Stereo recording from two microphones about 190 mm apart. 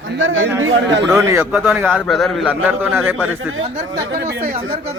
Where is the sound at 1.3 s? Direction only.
10° right (ahead or behind).